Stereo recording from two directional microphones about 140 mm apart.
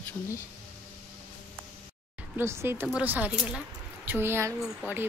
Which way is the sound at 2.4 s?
15° right (ahead or behind).